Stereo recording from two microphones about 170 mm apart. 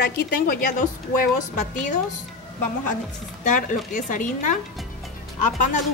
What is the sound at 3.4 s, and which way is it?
Speech, 45° left (ahead or behind).